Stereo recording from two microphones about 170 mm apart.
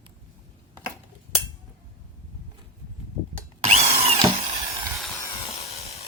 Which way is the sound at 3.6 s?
40° right (ahead or behind).